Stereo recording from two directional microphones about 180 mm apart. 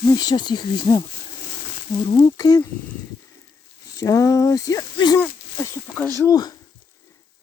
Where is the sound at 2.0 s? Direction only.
25° left (ahead or behind).